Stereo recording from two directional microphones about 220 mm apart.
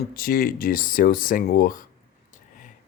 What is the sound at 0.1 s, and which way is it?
Speech, 40° left (ahead or behind).